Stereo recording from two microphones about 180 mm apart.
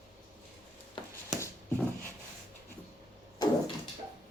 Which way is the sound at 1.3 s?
5° right (ahead or behind).